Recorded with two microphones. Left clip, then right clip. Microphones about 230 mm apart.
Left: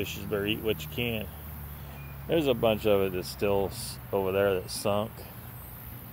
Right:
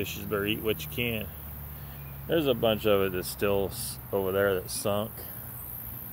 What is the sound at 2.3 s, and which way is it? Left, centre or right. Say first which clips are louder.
Speech: even; centre.